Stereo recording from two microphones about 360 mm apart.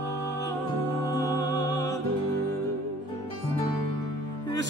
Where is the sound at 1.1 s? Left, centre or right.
Centre.